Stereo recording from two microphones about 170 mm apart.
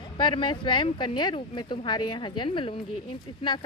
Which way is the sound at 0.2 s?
30° left (ahead or behind).